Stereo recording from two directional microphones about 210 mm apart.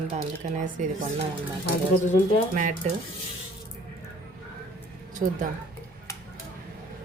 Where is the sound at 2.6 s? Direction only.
40° right (ahead or behind).